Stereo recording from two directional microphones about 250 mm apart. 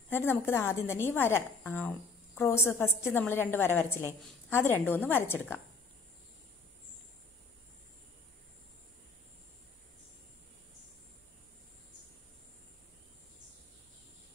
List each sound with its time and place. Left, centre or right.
0.1 s a woman's voice: centre